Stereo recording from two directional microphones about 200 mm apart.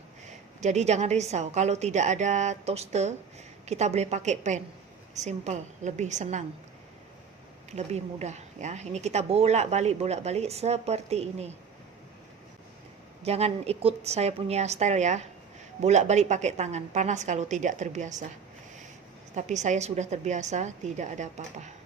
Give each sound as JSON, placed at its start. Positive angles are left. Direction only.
{"t": 0.6, "sound": "speech", "side_deg": -35}
{"t": 7.7, "sound": "speech", "side_deg": -35}
{"t": 13.2, "sound": "speech", "side_deg": -30}
{"t": 19.3, "sound": "speech", "side_deg": -35}